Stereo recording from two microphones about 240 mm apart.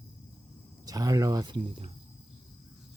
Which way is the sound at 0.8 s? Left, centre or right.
Centre.